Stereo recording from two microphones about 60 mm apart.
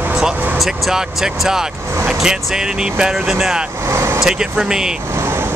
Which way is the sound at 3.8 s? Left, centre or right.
Right.